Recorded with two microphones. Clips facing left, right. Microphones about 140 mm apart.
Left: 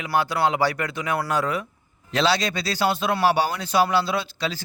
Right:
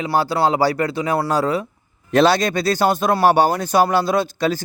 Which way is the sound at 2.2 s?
50° right (ahead or behind).